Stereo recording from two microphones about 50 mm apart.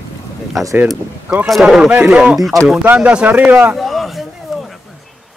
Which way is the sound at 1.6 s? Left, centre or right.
Centre.